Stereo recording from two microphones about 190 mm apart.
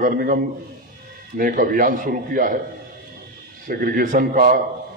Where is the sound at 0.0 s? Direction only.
45° right (ahead or behind).